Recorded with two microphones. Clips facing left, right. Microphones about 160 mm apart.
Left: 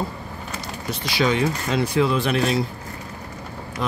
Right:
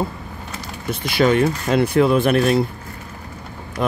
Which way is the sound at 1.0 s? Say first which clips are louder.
Right 5 dB; 55° right (ahead or behind).